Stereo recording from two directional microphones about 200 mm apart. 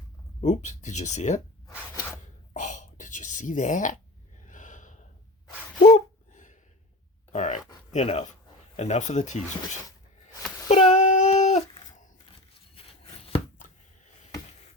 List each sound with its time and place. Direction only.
0.4 s speech: 35° left (ahead or behind)
2.5 s whispering: 40° left (ahead or behind)
4.4 s gasp: 40° left (ahead or behind)
7.3 s a sound: 35° left (ahead or behind)
7.9 s speech: 35° left (ahead or behind)
10.7 s a sound: 30° left (ahead or behind)
13.2 s chopping: 30° left (ahead or behind)